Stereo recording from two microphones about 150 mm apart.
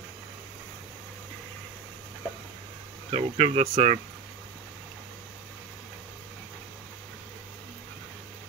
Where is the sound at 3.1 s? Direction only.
40° right (ahead or behind).